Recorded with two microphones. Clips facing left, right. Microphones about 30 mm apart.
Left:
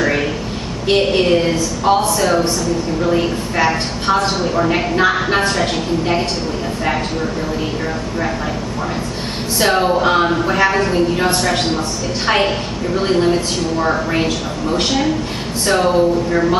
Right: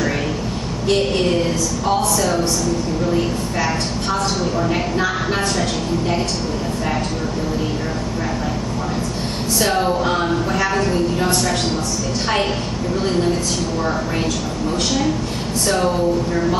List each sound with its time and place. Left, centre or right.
0.8 s a woman's voice: left
9.6 s a woman's voice: left
12.9 s a woman's voice: left